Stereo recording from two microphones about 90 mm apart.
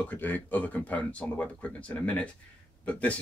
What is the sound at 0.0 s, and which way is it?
Speech, 20° left (ahead or behind).